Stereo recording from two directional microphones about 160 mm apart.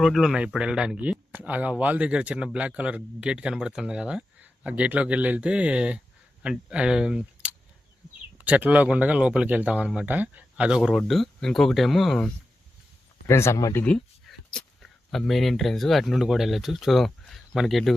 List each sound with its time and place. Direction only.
0.0 s speech: centre (ahead or behind)
13.2 s speech: 15° left (ahead or behind)
13.8 s speech: 5° left (ahead or behind)